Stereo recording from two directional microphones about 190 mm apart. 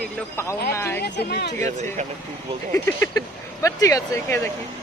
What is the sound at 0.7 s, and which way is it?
Speech, 15° left (ahead or behind).